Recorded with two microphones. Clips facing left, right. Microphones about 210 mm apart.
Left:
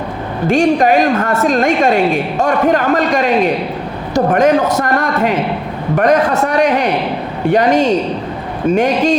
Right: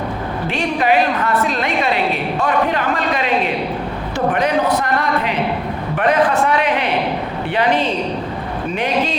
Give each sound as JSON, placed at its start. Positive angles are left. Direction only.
{"t": 0.4, "sound": "a woman's voice", "side_deg": 45}